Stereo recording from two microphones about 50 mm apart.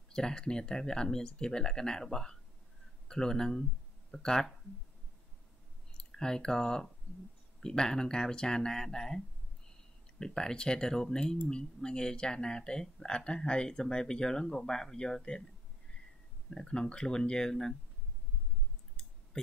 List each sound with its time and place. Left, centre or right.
0.1 s speech: centre
6.1 s speech: centre
16.4 s speech: centre
19.3 s a sound: centre